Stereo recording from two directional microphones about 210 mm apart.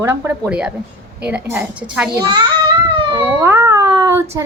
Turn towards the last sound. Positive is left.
turn(degrees=-15)  # may be behind; listen again after turning